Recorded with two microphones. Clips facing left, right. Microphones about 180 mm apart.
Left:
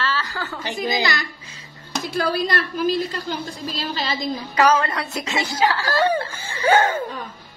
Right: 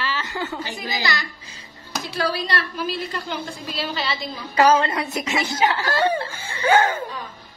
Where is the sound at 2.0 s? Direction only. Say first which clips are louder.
Left 3 dB; 50° left (ahead or behind).